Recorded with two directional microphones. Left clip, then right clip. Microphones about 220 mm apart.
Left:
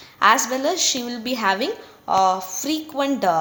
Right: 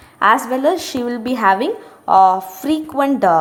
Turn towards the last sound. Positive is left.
turn(degrees=-20)  # may be behind; listen again after turning